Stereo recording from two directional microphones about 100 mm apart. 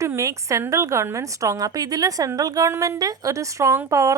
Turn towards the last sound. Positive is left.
turn(degrees=-30)  # may be behind; listen again after turning